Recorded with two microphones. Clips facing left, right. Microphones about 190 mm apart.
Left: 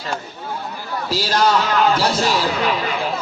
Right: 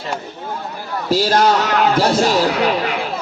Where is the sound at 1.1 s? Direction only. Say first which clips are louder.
Right 4 dB; 50° right (ahead or behind).